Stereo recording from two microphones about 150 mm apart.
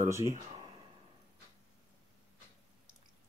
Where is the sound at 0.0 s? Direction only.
20° right (ahead or behind).